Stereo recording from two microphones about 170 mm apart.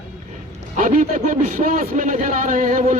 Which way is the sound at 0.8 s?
50° right (ahead or behind).